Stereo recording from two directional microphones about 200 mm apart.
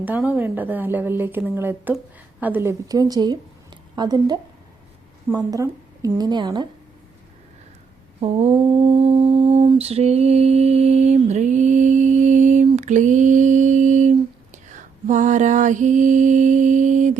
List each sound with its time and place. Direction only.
0.0 s a woman's voice: 10° right (ahead or behind)
8.5 s mantra: 25° right (ahead or behind)